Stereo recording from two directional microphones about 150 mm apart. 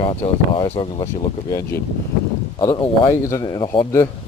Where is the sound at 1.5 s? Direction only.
15° left (ahead or behind).